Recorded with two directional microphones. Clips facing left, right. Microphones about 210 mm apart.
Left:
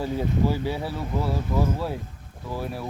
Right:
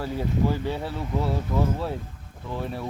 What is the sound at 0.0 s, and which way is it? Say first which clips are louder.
Speech: left 1 dB; 10° left (ahead or behind).